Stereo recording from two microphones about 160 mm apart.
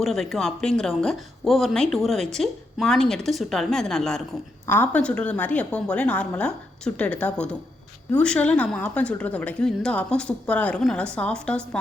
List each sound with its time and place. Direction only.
0.0 s speech: centre (ahead or behind)
4.6 s a woman's voice: 15° left (ahead or behind)